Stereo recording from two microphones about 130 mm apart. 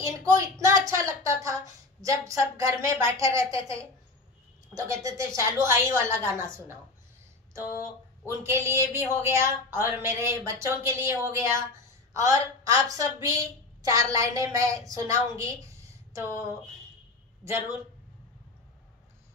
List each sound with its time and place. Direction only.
0.0 s speech: 25° right (ahead or behind)
8.3 s a woman's voice: 20° right (ahead or behind)